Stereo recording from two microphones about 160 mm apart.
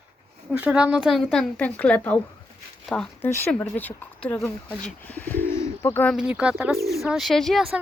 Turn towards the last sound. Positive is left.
turn(degrees=0)  # may be behind; listen again after turning